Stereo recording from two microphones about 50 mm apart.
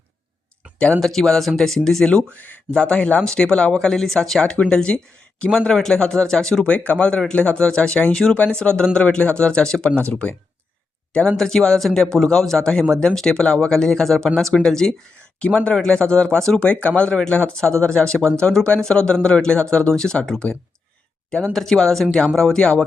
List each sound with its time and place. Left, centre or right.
0.9 s speech: centre
2.0 s speech: left
2.4 s speech: left
2.7 s speech: left
6.7 s speech: left
8.1 s speech: centre
10.1 s speech: left; by 14.9 s centre
15.4 s speech: left
21.5 s speech: centre